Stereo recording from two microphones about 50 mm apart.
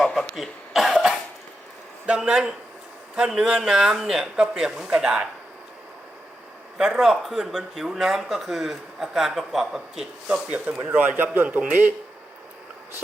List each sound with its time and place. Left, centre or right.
0.0 s cough: centre
2.0 s speech: centre
6.7 s speech: centre
10.5 s speech: right